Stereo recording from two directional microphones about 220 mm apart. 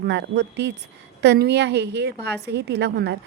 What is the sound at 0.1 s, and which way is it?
Speech, 50° right (ahead or behind).